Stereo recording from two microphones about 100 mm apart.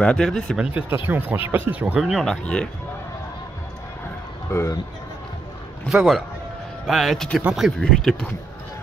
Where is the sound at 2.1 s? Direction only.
5° left (ahead or behind).